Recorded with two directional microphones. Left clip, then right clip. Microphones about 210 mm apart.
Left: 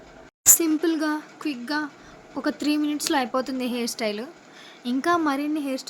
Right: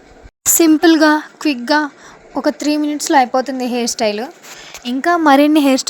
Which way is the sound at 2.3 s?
30° right (ahead or behind).